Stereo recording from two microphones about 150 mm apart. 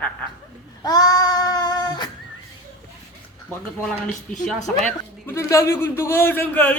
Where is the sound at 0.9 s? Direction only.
25° left (ahead or behind).